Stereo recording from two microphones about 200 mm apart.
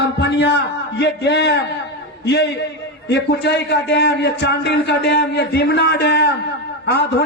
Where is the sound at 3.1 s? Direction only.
60° left (ahead or behind).